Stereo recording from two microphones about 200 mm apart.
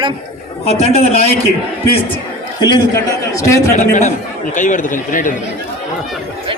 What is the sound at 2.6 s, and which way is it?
A man's voice, 20° left (ahead or behind).